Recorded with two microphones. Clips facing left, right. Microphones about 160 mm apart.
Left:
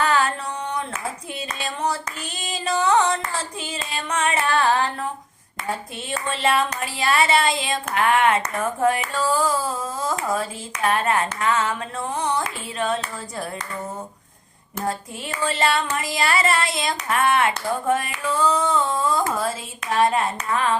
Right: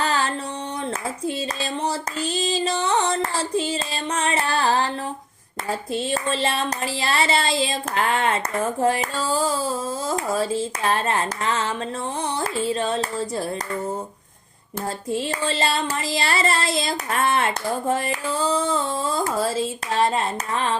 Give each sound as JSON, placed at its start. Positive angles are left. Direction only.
{"t": 0.0, "sound": "a sound", "side_deg": -30}
{"t": 1.6, "sound": "speech", "side_deg": -30}
{"t": 3.5, "sound": "child singing", "side_deg": -30}
{"t": 5.9, "sound": "child singing", "side_deg": -30}
{"t": 8.8, "sound": "speech", "side_deg": -30}
{"t": 12.2, "sound": "child singing", "side_deg": -30}
{"t": 15.3, "sound": "child singing", "side_deg": -30}